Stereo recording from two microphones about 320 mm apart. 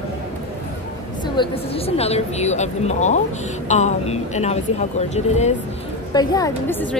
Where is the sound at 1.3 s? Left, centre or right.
Centre.